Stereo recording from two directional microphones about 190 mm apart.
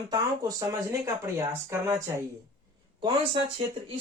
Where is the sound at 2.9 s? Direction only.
25° right (ahead or behind).